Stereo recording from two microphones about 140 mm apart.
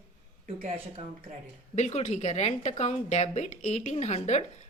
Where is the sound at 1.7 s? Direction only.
55° left (ahead or behind).